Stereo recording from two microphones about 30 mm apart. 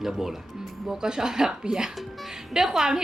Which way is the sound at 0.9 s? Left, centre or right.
Right.